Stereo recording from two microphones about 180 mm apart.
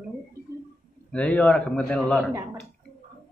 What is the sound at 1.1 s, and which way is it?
A man's voice, 5° left (ahead or behind).